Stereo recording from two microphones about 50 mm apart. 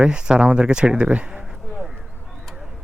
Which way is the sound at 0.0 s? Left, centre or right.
Centre.